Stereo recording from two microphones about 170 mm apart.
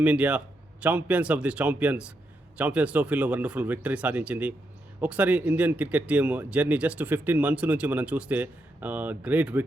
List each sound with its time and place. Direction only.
0.0 s speech: 10° right (ahead or behind)